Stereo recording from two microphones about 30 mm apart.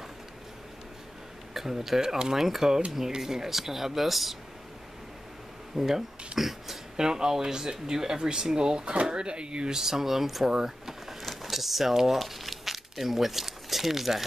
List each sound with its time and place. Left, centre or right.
1.5 s speech: centre
2.3 s speech: centre
5.8 s speech: centre
7.0 s speech: right
9.8 s speech: centre
10.5 s power windows: centre
11.2 s a sound: centre
11.9 s speech: centre
12.2 s crumpling: centre